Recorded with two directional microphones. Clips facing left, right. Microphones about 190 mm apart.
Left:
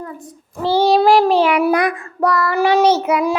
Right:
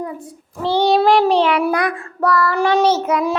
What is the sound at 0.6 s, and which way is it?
Child singing, 5° left (ahead or behind).